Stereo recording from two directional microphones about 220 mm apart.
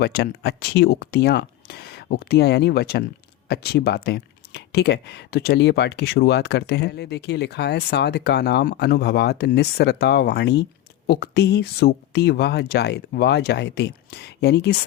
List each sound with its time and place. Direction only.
0.0 s speech: 45° left (ahead or behind)